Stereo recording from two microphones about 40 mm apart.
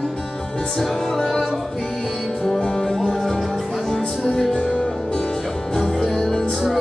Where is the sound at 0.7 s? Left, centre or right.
Centre.